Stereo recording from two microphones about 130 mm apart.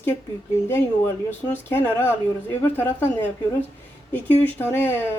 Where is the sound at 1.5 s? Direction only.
15° left (ahead or behind).